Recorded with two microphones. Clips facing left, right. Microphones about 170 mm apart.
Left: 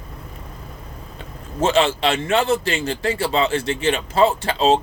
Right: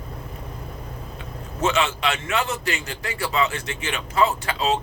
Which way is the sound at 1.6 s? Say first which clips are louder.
Left 5 dB; 30° left (ahead or behind).